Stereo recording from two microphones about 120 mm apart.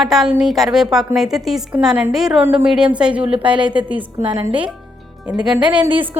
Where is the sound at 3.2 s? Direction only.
50° right (ahead or behind).